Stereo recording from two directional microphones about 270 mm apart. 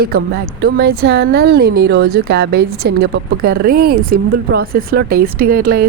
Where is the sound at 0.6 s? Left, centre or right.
Right.